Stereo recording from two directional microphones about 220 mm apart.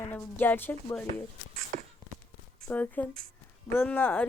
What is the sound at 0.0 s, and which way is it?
Speech, 10° left (ahead or behind).